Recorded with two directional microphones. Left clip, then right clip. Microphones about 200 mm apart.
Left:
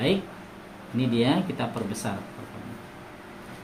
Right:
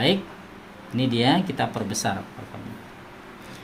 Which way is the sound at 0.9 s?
60° right (ahead or behind).